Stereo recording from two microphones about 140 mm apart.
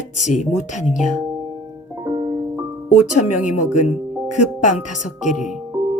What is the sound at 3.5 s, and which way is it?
Speech, 60° left (ahead or behind).